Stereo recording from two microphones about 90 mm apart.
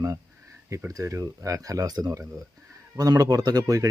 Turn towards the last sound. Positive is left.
turn(degrees=-40)  # may be behind; listen again after turning